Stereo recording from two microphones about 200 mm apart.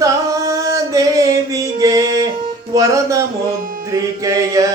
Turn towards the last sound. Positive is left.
turn(degrees=-15)  # may be behind; listen again after turning